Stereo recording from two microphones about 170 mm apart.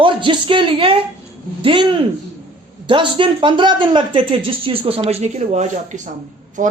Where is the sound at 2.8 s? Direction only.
30° right (ahead or behind).